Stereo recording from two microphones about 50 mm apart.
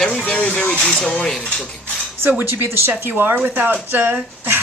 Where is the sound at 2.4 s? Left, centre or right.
Right.